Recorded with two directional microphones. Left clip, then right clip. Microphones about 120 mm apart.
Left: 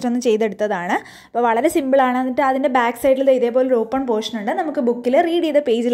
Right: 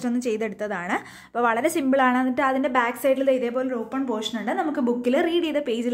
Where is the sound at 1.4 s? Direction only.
30° left (ahead or behind); by 4.1 s 45° left (ahead or behind).